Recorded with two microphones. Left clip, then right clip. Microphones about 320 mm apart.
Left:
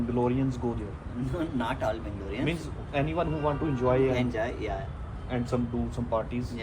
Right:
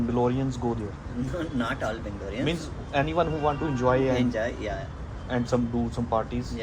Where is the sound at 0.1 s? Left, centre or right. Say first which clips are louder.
Right 1 dB; centre.